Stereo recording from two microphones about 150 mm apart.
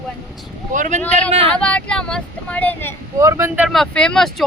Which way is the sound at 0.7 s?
60° right (ahead or behind).